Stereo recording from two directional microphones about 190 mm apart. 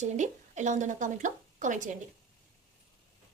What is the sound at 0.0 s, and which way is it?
Speech, 40° right (ahead or behind).